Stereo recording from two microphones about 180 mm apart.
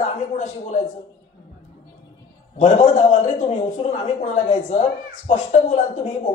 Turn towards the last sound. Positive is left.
turn(degrees=40)  # may be behind; listen again after turning